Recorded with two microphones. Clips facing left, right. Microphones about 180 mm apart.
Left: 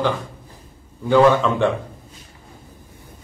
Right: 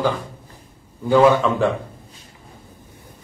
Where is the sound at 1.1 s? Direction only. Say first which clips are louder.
Even; 5° right (ahead or behind).